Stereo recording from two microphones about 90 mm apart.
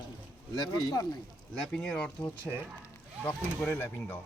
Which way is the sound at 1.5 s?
10° left (ahead or behind).